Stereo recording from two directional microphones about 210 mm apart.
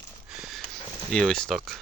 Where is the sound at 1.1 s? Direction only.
5° left (ahead or behind).